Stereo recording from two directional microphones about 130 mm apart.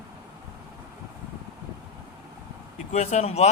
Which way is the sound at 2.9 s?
60° left (ahead or behind).